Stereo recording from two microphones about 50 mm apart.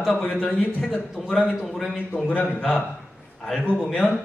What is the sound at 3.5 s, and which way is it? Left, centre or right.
Speech, centre.